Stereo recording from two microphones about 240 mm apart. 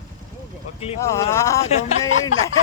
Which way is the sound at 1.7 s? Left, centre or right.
Left.